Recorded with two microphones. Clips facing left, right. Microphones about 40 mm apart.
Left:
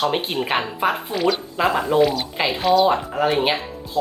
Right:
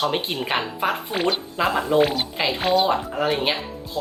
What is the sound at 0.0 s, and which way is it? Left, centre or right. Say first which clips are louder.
Speech: left 2 dB; centre.